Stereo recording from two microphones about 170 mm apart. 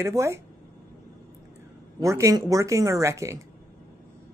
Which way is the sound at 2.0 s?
15° right (ahead or behind).